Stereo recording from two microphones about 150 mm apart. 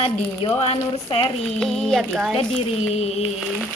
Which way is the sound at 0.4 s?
40° left (ahead or behind).